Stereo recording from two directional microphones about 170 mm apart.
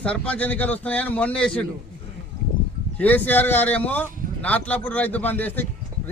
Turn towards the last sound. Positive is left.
turn(degrees=10)  # may be behind; listen again after turning